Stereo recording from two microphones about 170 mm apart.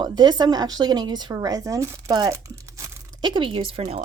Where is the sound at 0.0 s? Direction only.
25° right (ahead or behind).